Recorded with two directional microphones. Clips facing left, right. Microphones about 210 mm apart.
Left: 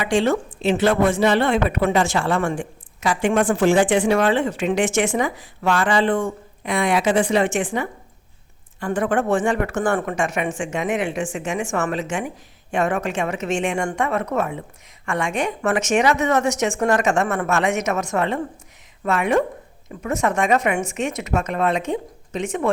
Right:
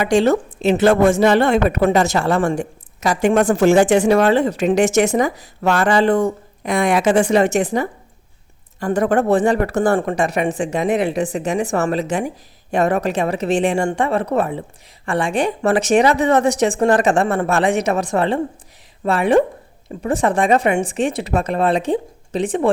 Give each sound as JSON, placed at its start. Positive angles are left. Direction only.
{"t": 0.0, "sound": "a woman's voice", "side_deg": -40}